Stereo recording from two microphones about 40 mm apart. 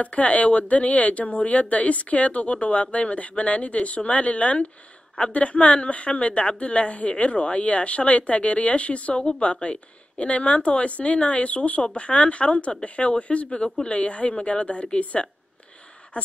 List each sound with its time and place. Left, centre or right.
0.0 s speech: left